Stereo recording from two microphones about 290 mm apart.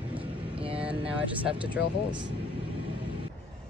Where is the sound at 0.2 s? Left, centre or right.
Centre.